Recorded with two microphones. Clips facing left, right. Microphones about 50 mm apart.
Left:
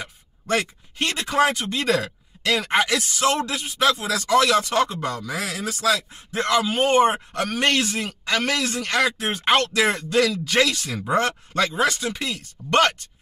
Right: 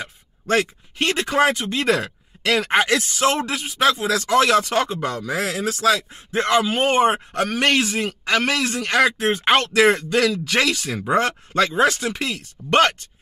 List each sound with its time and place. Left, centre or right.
0.0 s a man's voice: right
10.1 s a man's voice: right
12.6 s speech: centre